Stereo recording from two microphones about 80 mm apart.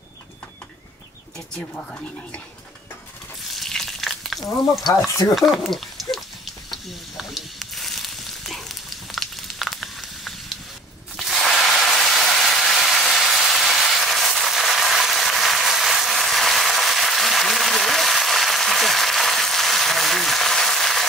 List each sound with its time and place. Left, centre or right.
1.6 s speech: centre
3.5 s frying: centre
5.0 s speech: left
5.3 s a sound: centre